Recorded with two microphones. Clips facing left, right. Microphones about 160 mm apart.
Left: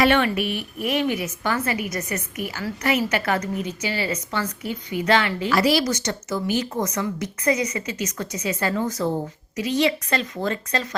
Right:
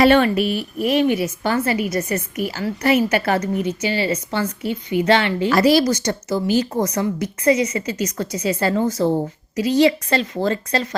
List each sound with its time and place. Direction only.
0.0 s a woman's voice: 35° right (ahead or behind)
5.5 s a woman's voice: 45° right (ahead or behind)